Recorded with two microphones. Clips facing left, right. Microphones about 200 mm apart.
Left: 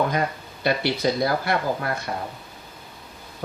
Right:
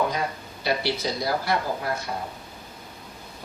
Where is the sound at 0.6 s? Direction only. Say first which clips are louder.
Left 4 dB; 55° left (ahead or behind).